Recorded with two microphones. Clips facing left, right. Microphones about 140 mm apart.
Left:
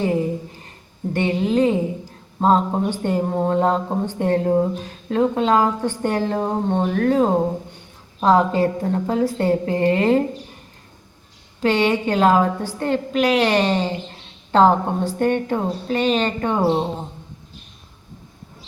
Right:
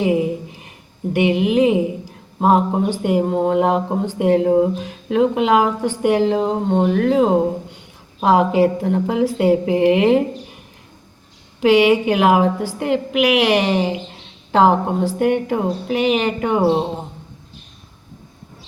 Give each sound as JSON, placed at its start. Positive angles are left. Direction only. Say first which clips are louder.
{"t": 0.0, "sound": "a sound", "louder": "right 3 dB", "side_deg": -15}
{"t": 1.1, "sound": "a woman's voice", "louder": "right 3 dB", "side_deg": -15}
{"t": 11.6, "sound": "a woman's voice", "louder": "right 5 dB", "side_deg": -15}